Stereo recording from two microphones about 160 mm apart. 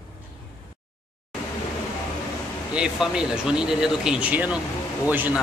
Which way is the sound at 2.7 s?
5° right (ahead or behind).